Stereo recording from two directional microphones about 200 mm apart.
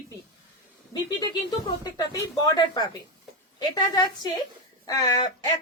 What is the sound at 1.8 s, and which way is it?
A woman's voice, 20° left (ahead or behind).